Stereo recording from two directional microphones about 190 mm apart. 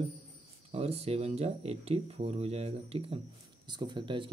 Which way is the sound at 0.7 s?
30° right (ahead or behind).